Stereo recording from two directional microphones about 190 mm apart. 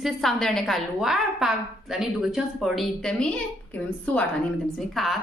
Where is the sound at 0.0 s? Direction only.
Centre (ahead or behind).